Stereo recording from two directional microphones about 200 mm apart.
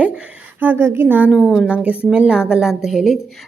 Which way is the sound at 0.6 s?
10° right (ahead or behind).